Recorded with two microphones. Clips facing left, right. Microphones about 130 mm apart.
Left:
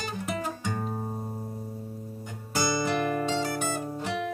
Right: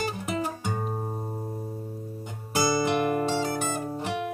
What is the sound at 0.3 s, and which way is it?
Music, 20° right (ahead or behind).